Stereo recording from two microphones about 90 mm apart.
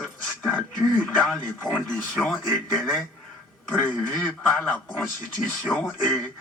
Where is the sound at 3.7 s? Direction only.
20° left (ahead or behind).